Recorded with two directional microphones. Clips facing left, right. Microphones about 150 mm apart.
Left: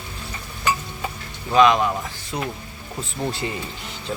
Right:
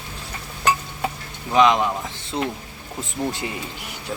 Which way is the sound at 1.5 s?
20° right (ahead or behind).